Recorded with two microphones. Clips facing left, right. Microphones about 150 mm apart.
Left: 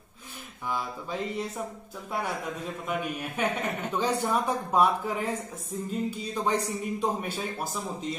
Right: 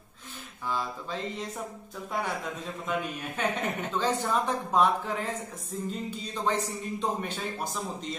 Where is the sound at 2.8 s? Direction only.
10° left (ahead or behind).